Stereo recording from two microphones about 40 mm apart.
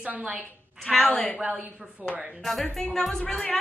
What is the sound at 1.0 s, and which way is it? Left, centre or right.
Speech, left.